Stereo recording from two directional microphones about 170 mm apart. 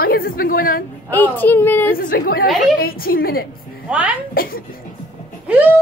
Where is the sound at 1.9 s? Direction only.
60° left (ahead or behind).